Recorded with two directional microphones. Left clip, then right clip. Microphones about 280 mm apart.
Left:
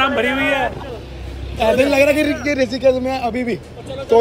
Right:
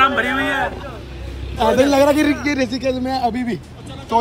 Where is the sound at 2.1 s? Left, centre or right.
Centre.